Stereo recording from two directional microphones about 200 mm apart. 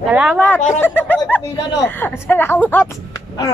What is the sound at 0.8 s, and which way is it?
Speech, 10° left (ahead or behind).